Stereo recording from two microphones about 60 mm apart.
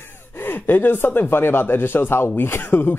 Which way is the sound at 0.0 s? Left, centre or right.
Left.